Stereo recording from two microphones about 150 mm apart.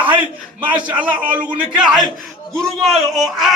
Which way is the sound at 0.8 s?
10° right (ahead or behind).